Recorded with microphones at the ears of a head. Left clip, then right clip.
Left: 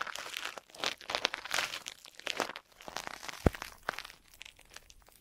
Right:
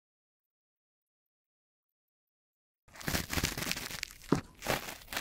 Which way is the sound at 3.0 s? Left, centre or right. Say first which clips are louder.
Right 1 dB; right.